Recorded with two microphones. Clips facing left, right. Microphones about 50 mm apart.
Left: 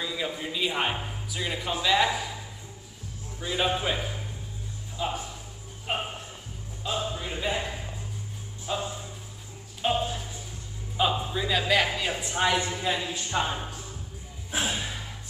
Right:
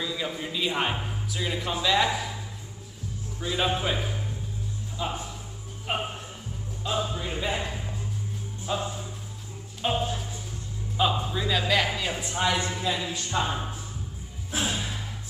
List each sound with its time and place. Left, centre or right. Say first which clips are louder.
0.0 s a man's voice: even; centre
3.3 s a man's voice: even; centre
7.1 s a man's voice: right 1 dB; centre
9.8 s music: even; centre
11.0 s a man's voice: even; centre
12.4 s speech: left 1 dB; centre
14.5 s gasp: even; centre